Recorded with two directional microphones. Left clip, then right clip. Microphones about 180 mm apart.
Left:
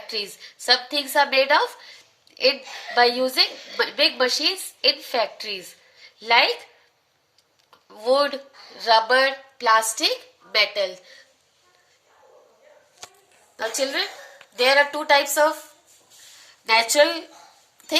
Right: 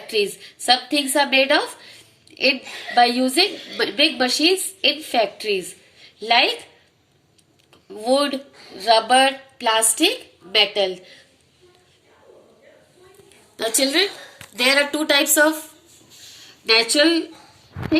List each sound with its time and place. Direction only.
0.1 s a woman's voice: 60° left (ahead or behind)
7.9 s a woman's voice: 65° left (ahead or behind)
13.6 s a woman's voice: 45° left (ahead or behind)
16.6 s speech: 70° left (ahead or behind)